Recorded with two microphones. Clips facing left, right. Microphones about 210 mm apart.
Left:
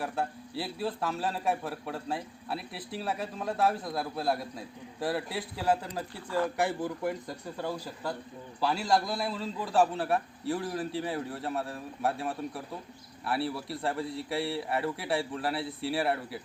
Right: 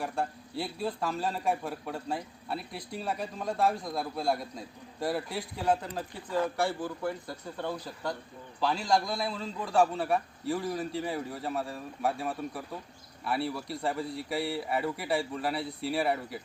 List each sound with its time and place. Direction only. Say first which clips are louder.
0.0 s a man's voice: even; centre (ahead or behind)
6.6 s a man's voice: left 1 dB; 20° left (ahead or behind)
7.6 s a man's voice: even; 5° left (ahead or behind)